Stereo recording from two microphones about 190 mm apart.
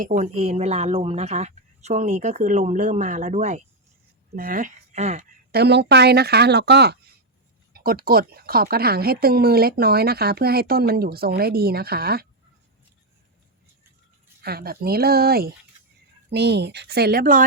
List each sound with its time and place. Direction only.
0.2 s a woman's voice: 35° right (ahead or behind)
5.5 s speech: 60° right (ahead or behind)
14.4 s speech: 55° right (ahead or behind)